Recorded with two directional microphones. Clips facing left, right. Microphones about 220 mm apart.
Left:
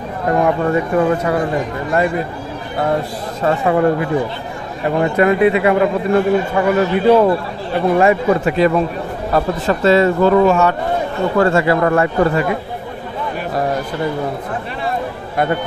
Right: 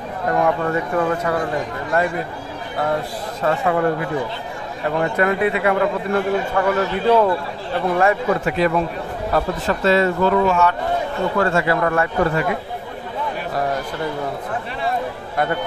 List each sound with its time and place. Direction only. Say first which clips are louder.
0.3 s a man's voice: left 4 dB; 20° left (ahead or behind)
3.4 s a man's voice: left 4 dB; 25° left (ahead or behind)
10.4 s a man's voice: left 4 dB; 45° left (ahead or behind)
11.3 s a man's voice: left 6 dB; 30° left (ahead or behind)